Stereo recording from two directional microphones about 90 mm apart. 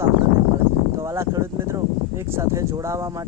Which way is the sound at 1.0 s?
35° right (ahead or behind).